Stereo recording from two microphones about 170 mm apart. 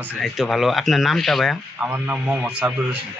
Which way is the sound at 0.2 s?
Centre (ahead or behind).